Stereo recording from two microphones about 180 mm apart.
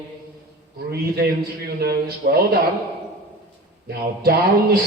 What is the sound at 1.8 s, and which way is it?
Speech, 60° right (ahead or behind).